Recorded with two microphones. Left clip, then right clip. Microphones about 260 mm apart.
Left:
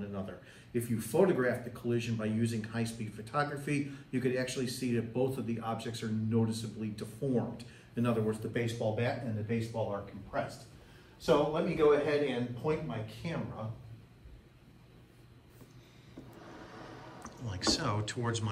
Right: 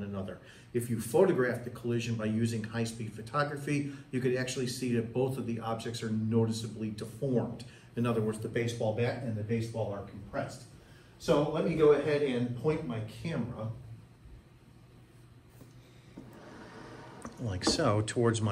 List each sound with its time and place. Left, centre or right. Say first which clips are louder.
0.0 s speech: right 1 dB; centre
11.1 s a man's voice: even; left
17.2 s speech: right 3 dB; centre